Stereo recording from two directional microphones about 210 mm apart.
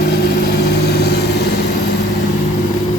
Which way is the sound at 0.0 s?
50° left (ahead or behind).